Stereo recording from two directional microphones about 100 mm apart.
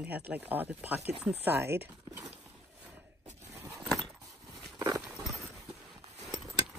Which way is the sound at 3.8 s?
Centre (ahead or behind).